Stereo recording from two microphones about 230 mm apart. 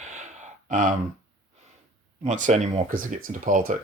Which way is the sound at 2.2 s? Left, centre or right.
Right.